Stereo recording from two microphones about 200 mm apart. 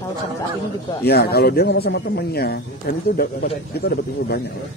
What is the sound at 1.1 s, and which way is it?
Speech, 50° left (ahead or behind).